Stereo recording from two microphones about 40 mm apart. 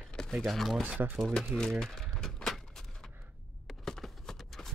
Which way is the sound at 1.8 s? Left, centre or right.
Centre.